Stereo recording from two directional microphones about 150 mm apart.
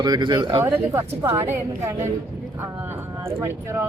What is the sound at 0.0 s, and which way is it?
Speech, 30° right (ahead or behind).